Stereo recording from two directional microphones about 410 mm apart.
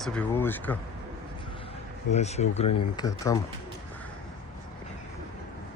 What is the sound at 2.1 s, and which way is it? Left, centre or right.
Speech, centre.